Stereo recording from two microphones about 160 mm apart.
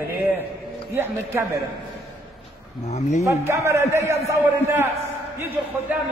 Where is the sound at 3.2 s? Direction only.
20° right (ahead or behind).